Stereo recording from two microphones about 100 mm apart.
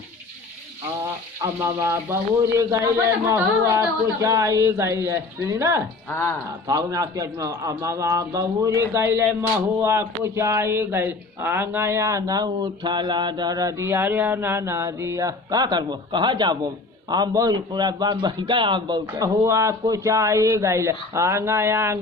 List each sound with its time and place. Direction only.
1.5 s speech: 25° right (ahead or behind)
6.1 s speech: 25° left (ahead or behind)
6.7 s a man's voice: 40° right (ahead or behind)
19.5 s speech: 30° right (ahead or behind)